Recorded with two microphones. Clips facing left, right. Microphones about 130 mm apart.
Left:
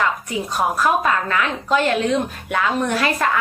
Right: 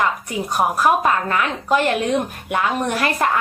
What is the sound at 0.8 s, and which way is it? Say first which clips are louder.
Speech: right 2 dB; 40° right (ahead or behind).